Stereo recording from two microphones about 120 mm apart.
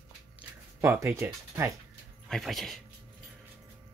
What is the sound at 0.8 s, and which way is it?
Speech, 20° right (ahead or behind).